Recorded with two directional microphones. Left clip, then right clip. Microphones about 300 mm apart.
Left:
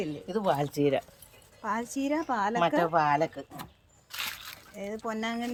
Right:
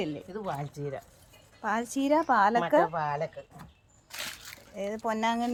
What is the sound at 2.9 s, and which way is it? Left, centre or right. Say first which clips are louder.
Speech: left 6 dB; left.